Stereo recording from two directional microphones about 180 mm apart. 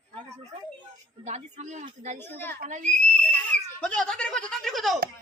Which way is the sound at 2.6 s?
40° right (ahead or behind).